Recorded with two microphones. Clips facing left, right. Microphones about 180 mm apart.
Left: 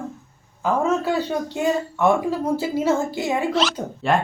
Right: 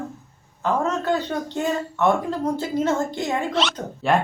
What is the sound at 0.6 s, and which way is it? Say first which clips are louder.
Speech: left 2 dB; 10° left (ahead or behind).